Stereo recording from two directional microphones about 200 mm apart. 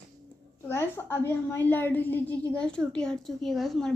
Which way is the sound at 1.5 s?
10° left (ahead or behind).